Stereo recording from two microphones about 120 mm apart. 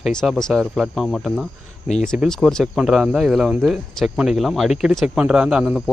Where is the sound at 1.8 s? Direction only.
70° left (ahead or behind).